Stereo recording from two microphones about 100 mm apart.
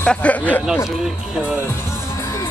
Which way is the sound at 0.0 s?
10° left (ahead or behind).